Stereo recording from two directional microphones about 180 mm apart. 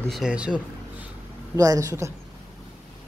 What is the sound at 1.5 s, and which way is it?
Speech, 20° right (ahead or behind).